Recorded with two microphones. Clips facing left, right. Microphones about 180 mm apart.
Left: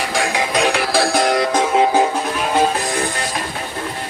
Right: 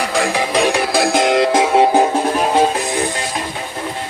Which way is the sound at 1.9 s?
30° right (ahead or behind).